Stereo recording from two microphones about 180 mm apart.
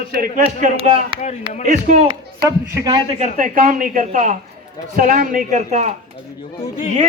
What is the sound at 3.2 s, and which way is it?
Speech, 50° right (ahead or behind).